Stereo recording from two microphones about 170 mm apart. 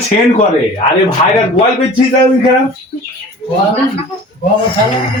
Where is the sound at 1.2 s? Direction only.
35° left (ahead or behind).